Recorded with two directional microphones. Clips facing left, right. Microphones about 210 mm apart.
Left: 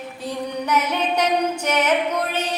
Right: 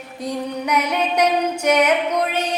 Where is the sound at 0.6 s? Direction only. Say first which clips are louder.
Right 1 dB; 10° right (ahead or behind).